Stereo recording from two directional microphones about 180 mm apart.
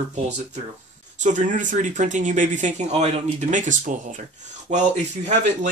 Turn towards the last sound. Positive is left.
turn(degrees=-40)  # may be behind; listen again after turning